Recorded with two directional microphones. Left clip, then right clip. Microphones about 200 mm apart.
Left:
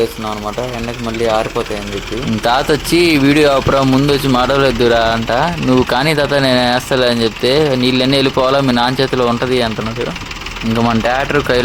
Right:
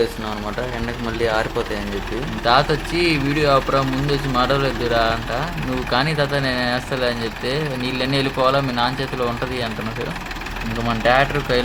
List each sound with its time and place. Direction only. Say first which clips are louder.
2.4 s speech: left 3 dB; 60° left (ahead or behind)
11.0 s speech: left 3 dB; 50° left (ahead or behind)